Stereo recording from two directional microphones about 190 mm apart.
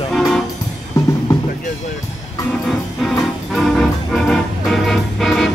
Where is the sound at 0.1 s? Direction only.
Centre (ahead or behind).